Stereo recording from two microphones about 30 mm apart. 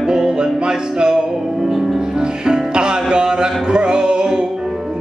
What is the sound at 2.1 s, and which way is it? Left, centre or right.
Music, right.